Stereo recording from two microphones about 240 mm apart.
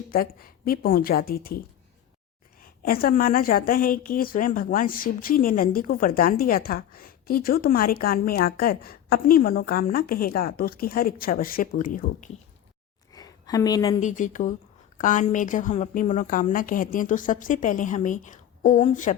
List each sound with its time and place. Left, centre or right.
0.1 s a woman's voice: left
2.8 s a woman's voice: left
13.1 s a sound: centre
14.0 s a woman's voice: left